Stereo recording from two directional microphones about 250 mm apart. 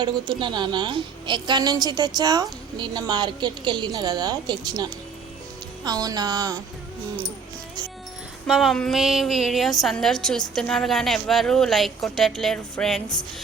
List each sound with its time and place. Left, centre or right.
0.0 s a woman's voice: centre
8.4 s a woman's voice: centre